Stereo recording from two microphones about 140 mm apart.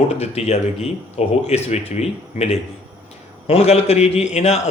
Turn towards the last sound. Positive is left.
turn(degrees=50)  # may be behind; listen again after turning